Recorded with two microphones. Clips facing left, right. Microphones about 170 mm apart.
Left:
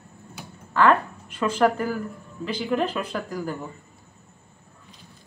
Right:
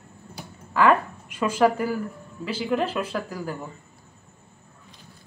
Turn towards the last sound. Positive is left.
turn(degrees=-5)  # may be behind; listen again after turning